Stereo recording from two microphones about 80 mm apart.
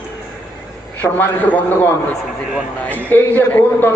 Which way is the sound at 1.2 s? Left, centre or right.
Left.